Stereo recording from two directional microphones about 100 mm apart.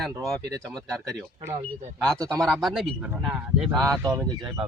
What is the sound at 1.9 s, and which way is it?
Speech, 5° left (ahead or behind).